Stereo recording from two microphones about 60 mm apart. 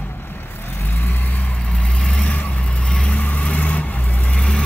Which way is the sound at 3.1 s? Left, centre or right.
Left.